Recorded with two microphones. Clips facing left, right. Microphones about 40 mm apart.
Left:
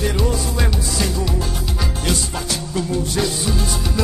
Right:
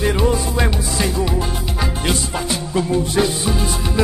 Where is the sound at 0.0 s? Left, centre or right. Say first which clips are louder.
Right 3 dB; right.